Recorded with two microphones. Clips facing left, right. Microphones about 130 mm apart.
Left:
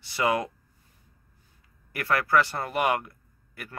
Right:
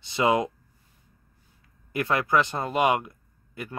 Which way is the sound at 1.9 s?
20° right (ahead or behind).